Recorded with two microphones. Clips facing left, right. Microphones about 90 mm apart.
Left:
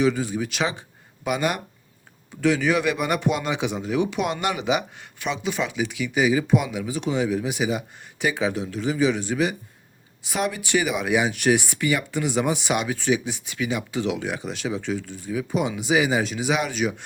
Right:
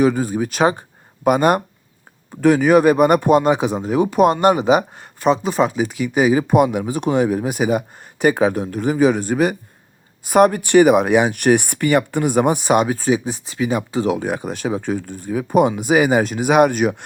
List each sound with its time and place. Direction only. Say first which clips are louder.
0.0 s speech: right 5 dB; 45° right (ahead or behind)